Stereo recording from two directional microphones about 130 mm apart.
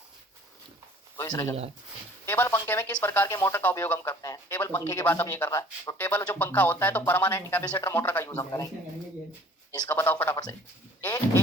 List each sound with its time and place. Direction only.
1.2 s speech: 25° left (ahead or behind)
4.5 s speech: 15° left (ahead or behind)
6.0 s speech: 15° left (ahead or behind)
7.6 s speech: 30° left (ahead or behind)
7.9 s speech: 15° left (ahead or behind)
9.9 s speech: 15° left (ahead or behind)